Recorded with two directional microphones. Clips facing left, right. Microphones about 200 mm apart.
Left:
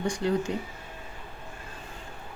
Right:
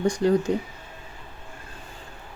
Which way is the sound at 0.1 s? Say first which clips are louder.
Right 5 dB; 40° right (ahead or behind).